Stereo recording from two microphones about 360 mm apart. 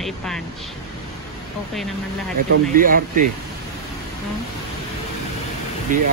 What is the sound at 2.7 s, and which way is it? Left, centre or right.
Speech, right.